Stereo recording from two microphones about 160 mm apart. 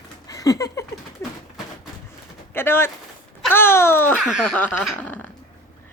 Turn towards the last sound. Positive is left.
turn(degrees=10)  # may be behind; listen again after turning